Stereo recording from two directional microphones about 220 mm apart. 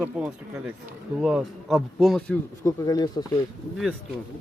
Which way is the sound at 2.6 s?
15° left (ahead or behind).